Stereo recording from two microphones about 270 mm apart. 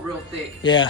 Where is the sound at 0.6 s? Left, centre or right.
Centre.